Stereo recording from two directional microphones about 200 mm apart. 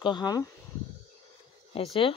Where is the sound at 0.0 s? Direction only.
20° left (ahead or behind).